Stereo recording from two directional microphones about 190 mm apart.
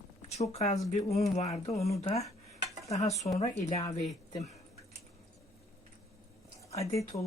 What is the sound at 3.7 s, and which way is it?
Speech, 15° left (ahead or behind).